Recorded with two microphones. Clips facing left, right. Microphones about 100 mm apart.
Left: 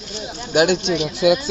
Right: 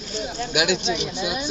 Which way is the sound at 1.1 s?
90° left.